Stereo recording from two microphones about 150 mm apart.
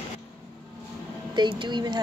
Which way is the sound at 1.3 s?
30° right (ahead or behind).